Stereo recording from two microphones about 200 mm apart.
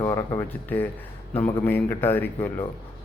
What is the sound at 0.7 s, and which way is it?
Mantra, 10° left (ahead or behind).